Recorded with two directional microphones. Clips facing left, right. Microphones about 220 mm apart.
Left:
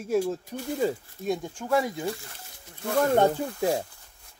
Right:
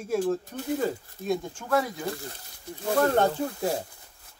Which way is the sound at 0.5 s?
15° left (ahead or behind).